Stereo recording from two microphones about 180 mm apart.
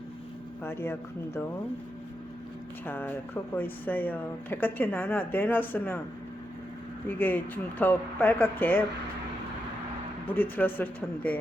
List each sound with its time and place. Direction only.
0.6 s speech: 15° left (ahead or behind)
2.8 s speech: 10° left (ahead or behind)
7.2 s speech: 10° left (ahead or behind)
10.2 s speech: 10° left (ahead or behind)